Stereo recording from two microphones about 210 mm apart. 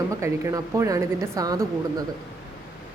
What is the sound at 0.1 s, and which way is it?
Speech, 15° right (ahead or behind).